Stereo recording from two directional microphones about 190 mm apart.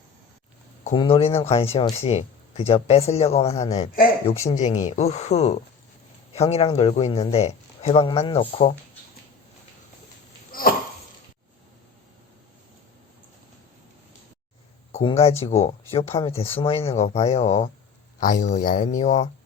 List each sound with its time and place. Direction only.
0.9 s speech: 30° left (ahead or behind)
10.5 s a sound: 50° left (ahead or behind)
14.9 s speech: 30° left (ahead or behind)
16.1 s speech: 15° left (ahead or behind)
16.6 s speech: 30° left (ahead or behind)